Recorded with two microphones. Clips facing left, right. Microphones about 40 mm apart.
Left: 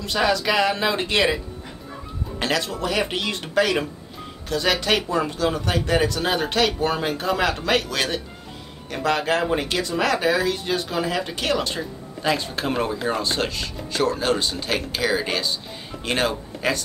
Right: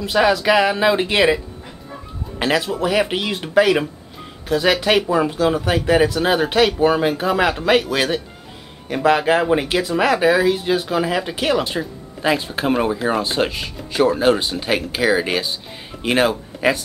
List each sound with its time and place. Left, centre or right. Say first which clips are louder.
0.0 s speech: right 5 dB; centre